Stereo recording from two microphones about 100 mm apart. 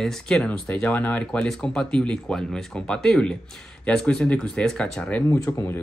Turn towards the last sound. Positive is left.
turn(degrees=30)  # may be behind; listen again after turning